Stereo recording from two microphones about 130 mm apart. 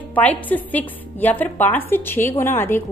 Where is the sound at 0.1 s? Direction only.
10° left (ahead or behind).